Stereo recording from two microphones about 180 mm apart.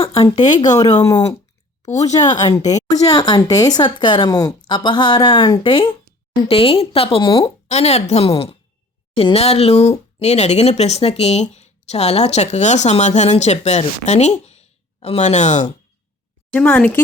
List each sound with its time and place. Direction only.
0.7 s a woman's voice: 20° left (ahead or behind); by 15.6 s 40° left (ahead or behind)
16.5 s a woman's voice: 5° left (ahead or behind)